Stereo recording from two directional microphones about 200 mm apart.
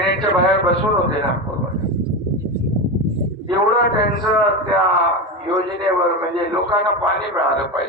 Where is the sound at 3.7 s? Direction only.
60° left (ahead or behind).